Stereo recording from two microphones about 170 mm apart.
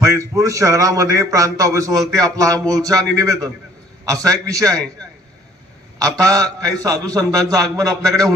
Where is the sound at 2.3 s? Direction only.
20° right (ahead or behind).